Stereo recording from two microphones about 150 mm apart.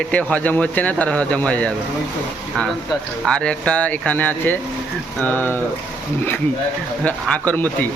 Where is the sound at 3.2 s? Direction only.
5° left (ahead or behind).